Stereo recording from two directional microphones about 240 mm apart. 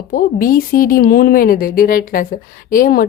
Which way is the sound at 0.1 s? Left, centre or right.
Left.